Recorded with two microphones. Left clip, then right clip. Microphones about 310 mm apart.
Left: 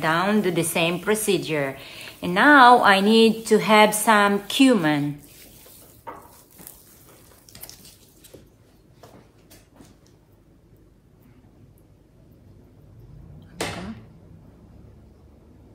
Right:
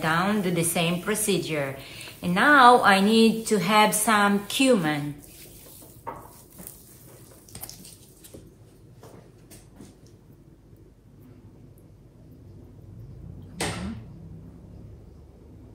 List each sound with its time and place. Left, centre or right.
0.0 s a woman's voice: left